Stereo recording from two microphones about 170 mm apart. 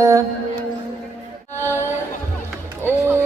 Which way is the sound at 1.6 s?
15° left (ahead or behind).